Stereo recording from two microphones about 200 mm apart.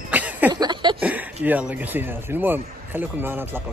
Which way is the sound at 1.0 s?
5° right (ahead or behind).